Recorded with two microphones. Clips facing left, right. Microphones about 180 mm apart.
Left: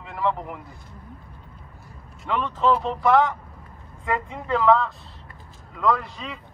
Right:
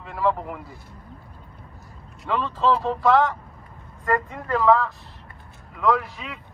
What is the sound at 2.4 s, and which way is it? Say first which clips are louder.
Speech: even; 15° left (ahead or behind).